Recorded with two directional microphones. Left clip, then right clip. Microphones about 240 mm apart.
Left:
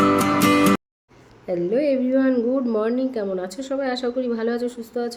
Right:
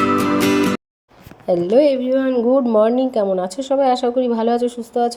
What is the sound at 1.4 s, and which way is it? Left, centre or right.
Speech, right.